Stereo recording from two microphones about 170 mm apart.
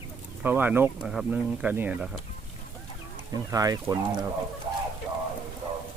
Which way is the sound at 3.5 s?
20° right (ahead or behind).